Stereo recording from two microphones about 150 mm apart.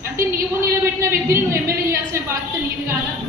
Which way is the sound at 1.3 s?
20° right (ahead or behind).